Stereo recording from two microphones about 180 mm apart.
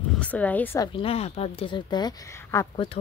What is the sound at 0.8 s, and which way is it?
Speech, 30° left (ahead or behind).